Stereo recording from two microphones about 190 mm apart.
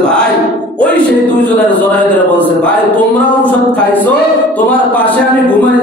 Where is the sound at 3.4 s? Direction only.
10° left (ahead or behind).